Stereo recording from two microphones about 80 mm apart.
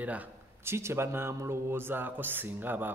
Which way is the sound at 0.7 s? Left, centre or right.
Right.